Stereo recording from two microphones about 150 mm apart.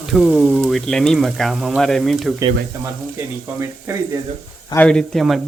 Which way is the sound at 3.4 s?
15° right (ahead or behind).